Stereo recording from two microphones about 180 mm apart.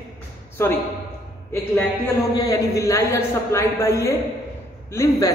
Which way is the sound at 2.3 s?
20° left (ahead or behind).